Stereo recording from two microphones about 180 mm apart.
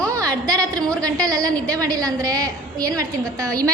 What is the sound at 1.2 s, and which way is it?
A woman's voice, 20° right (ahead or behind).